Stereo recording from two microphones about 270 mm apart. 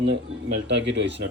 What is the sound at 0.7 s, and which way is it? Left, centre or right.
Speech, right.